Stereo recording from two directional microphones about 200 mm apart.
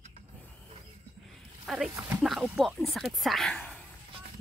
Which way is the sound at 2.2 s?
Centre (ahead or behind).